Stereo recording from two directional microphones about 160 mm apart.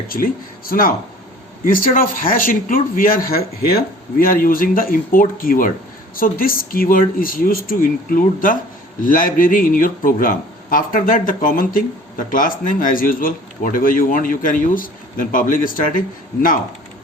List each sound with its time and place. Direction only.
0.1 s speech: 65° left (ahead or behind)
4.2 s speech: 60° left (ahead or behind)